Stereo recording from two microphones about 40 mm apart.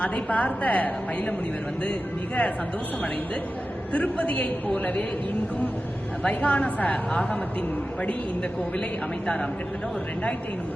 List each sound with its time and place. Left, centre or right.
0.0 s a woman's voice: left
3.9 s a woman's voice: left
6.2 s a woman's voice: left
9.2 s speech: left